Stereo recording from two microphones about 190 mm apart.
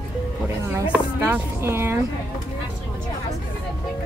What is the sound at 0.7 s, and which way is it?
Speech, 10° right (ahead or behind).